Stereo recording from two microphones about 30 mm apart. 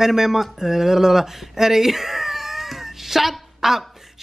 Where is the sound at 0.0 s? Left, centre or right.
Centre.